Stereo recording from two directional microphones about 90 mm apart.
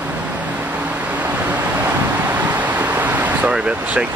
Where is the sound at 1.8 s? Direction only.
20° right (ahead or behind).